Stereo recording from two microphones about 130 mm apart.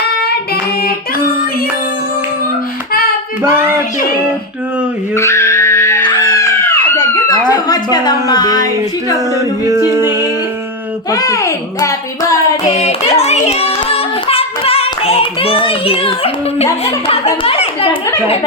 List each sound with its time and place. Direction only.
3.4 s a child's voice: 20° right (ahead or behind)
5.1 s music: 20° left (ahead or behind)
6.1 s a sound: 30° left (ahead or behind)
7.3 s speech: 30° left (ahead or behind)
9.1 s singing: 25° right (ahead or behind)
11.1 s a child's voice: 25° left (ahead or behind)
12.7 s hands: 55° left (ahead or behind)
16.8 s a child's voice: 50° left (ahead or behind)